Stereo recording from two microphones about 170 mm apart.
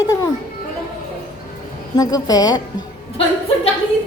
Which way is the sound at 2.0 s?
20° left (ahead or behind).